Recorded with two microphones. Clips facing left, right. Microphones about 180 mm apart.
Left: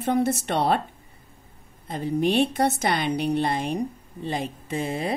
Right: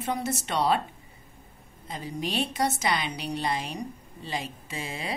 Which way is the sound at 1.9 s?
55° left (ahead or behind).